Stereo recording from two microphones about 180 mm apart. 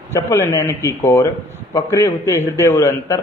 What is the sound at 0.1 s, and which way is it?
A man's voice, 15° left (ahead or behind).